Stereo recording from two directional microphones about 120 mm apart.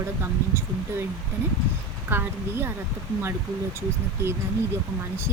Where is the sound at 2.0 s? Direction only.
15° right (ahead or behind).